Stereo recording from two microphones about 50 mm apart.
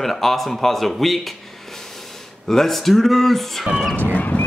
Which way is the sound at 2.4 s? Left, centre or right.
Centre.